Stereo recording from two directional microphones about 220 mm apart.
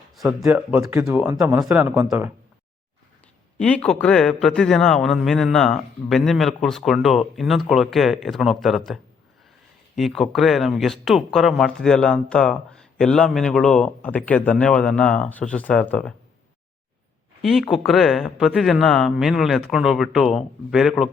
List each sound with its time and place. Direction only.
0.2 s speech: centre (ahead or behind)
3.6 s speech: 5° left (ahead or behind)
10.0 s speech: centre (ahead or behind)
17.4 s speech: centre (ahead or behind)